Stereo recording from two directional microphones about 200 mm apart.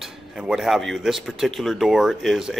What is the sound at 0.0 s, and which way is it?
Speech, centre (ahead or behind).